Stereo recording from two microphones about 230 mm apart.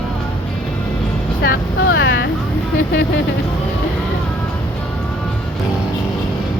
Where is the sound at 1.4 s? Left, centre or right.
Left.